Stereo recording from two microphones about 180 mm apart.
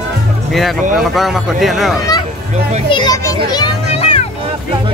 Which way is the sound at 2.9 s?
20° left (ahead or behind).